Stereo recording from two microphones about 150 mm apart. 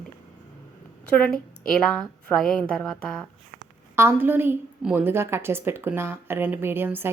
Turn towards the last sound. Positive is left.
turn(degrees=-15)  # may be behind; listen again after turning